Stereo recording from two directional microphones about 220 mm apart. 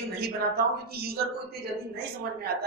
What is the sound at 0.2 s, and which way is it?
A woman's voice, 45° right (ahead or behind).